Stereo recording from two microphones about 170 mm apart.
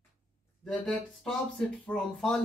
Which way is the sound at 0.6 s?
Centre (ahead or behind).